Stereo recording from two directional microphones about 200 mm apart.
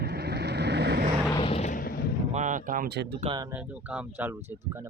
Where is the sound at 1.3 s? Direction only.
25° left (ahead or behind); by 2.1 s 50° left (ahead or behind).